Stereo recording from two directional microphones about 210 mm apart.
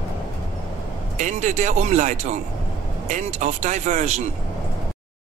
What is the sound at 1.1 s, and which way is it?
Speech, 35° right (ahead or behind).